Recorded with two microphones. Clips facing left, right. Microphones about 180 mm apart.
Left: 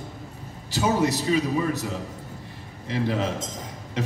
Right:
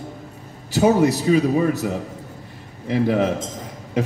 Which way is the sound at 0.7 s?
60° right (ahead or behind).